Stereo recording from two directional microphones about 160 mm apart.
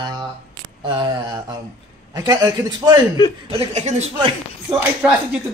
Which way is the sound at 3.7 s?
45° right (ahead or behind).